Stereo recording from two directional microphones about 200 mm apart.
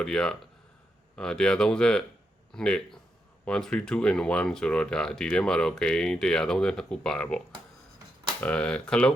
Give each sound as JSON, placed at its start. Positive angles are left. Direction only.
{"t": 0.0, "sound": "speech", "side_deg": 5}